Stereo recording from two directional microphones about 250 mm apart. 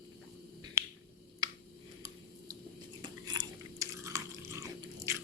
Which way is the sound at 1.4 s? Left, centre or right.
Centre.